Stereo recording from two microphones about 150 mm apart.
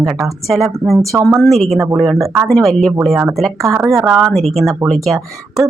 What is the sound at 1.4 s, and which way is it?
Speech, centre (ahead or behind).